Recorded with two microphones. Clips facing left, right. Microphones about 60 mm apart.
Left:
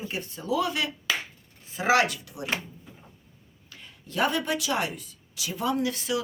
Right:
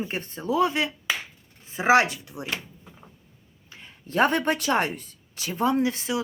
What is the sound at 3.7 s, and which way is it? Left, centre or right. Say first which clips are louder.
Speech: right 6 dB; right.